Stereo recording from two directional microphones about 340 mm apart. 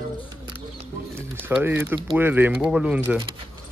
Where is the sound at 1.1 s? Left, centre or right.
Centre.